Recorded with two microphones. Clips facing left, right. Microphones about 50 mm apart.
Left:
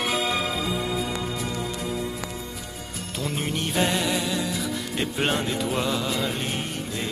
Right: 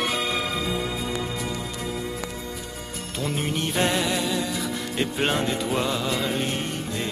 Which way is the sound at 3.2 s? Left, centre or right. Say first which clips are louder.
Right 1 dB; centre.